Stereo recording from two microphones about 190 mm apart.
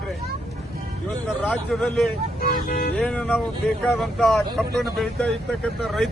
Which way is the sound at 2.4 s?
50° left (ahead or behind).